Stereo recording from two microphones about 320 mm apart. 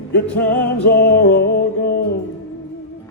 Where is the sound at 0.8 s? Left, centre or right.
Left.